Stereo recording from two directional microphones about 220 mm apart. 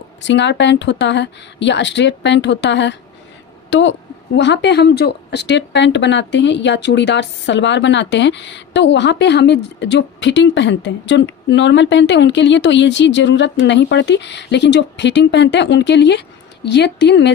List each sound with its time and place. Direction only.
0.2 s a woman's voice: 55° left (ahead or behind)